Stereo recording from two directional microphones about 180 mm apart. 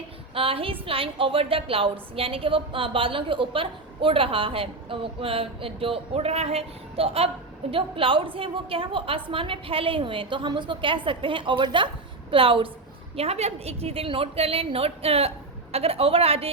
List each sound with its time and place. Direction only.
0.3 s a woman's voice: 30° right (ahead or behind)